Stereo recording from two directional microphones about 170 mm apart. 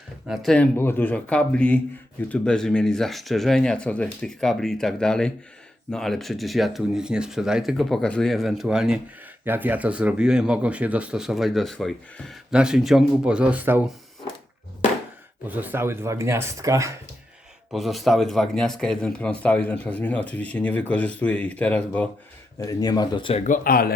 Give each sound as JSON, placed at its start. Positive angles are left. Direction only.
{"t": 0.3, "sound": "speech", "side_deg": 5}
{"t": 15.4, "sound": "speech", "side_deg": -10}
{"t": 17.7, "sound": "speech", "side_deg": 0}
{"t": 22.6, "sound": "speech", "side_deg": 25}
{"t": 23.4, "sound": "speech", "side_deg": 55}